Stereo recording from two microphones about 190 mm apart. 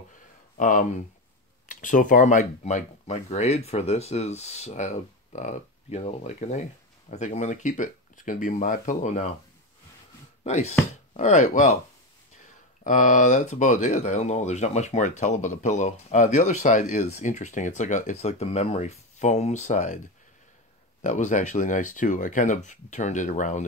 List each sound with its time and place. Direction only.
0.6 s speech: 45° left (ahead or behind)
10.4 s speech: 35° left (ahead or behind)
12.8 s speech: 45° left (ahead or behind)
21.0 s speech: 40° left (ahead or behind)